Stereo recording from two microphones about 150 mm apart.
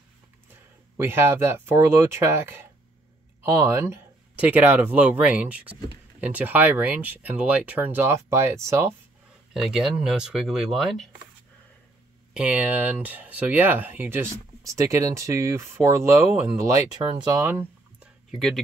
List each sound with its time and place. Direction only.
0.9 s speech: 15° right (ahead or behind)
9.5 s speech: 5° right (ahead or behind)
12.4 s speech: 10° right (ahead or behind); by 17.4 s 30° right (ahead or behind)
17.4 s speech: 15° right (ahead or behind)
18.3 s speech: centre (ahead or behind)